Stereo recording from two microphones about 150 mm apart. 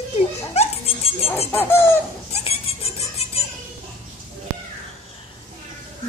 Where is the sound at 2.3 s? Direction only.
45° left (ahead or behind).